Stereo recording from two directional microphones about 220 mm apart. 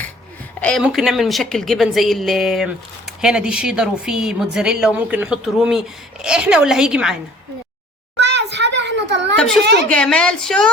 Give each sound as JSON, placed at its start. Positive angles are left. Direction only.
{"t": 0.6, "sound": "speech", "side_deg": 5}
{"t": 8.2, "sound": "children playing", "side_deg": -50}
{"t": 9.9, "sound": "speech", "side_deg": 5}